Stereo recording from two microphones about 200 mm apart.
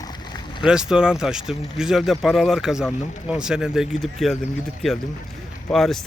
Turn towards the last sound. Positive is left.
turn(degrees=0)  # may be behind; listen again after turning